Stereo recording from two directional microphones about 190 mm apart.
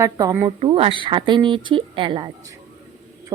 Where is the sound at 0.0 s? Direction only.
15° right (ahead or behind).